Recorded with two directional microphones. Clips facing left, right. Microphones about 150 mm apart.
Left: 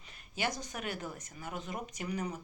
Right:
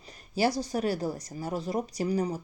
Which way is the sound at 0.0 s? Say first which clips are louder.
Right 10 dB; 35° right (ahead or behind).